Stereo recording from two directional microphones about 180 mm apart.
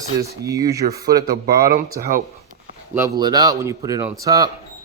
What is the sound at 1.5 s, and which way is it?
Speech, 55° right (ahead or behind).